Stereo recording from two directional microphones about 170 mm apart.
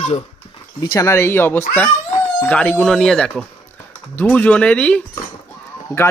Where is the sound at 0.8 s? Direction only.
20° left (ahead or behind).